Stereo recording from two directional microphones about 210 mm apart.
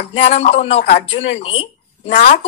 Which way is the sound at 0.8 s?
50° left (ahead or behind).